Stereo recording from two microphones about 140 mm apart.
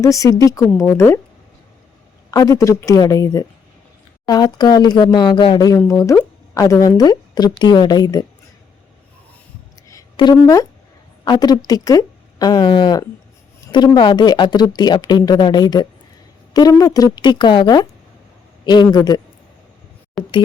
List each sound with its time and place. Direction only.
0.0 s speech: 25° left (ahead or behind)
2.3 s speech: 25° left (ahead or behind)
10.3 s speech: 25° left (ahead or behind)
20.2 s speech: centre (ahead or behind)